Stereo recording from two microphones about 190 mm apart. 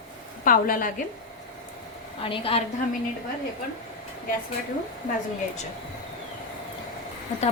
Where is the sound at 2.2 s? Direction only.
30° left (ahead or behind).